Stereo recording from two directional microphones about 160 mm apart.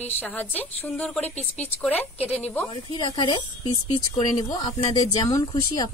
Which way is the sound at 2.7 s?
30° left (ahead or behind).